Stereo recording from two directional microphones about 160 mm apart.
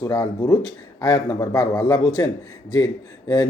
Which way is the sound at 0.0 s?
25° left (ahead or behind).